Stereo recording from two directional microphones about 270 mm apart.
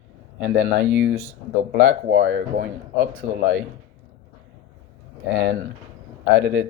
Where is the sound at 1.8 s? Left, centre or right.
Right.